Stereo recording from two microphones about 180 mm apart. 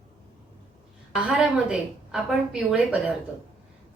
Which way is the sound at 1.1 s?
5° right (ahead or behind).